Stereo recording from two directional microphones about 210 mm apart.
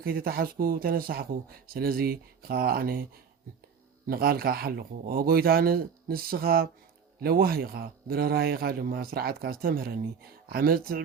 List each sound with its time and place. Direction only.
0.0 s speech: 45° right (ahead or behind)
4.0 s speech: 45° right (ahead or behind)